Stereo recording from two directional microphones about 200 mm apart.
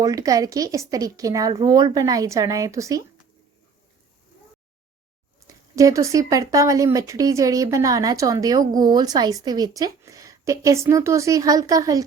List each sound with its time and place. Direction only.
0.0 s speech: 15° right (ahead or behind)
5.7 s speech: 15° right (ahead or behind)